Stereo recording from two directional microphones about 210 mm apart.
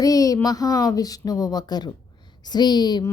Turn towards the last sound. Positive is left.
turn(degrees=20)  # may be behind; listen again after turning